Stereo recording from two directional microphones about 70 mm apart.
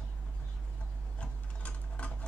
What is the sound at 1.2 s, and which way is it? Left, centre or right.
Sewing machine, centre.